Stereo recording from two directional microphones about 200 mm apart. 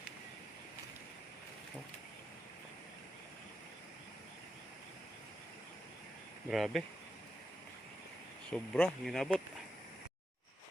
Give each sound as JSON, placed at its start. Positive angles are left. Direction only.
{"t": 6.5, "sound": "speech", "side_deg": 0}
{"t": 8.4, "sound": "speech", "side_deg": 5}